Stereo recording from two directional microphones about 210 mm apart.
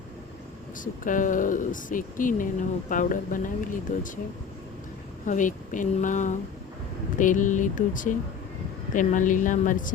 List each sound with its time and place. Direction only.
1.0 s speech: 40° left (ahead or behind)
5.2 s speech: 35° left (ahead or behind)